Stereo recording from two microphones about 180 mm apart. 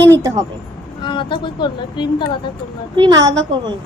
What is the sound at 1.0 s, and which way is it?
Speech, 25° left (ahead or behind).